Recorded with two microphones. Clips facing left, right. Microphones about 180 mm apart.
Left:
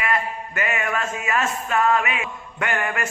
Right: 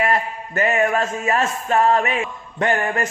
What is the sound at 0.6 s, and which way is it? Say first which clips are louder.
Music: right 7 dB; 35° right (ahead or behind).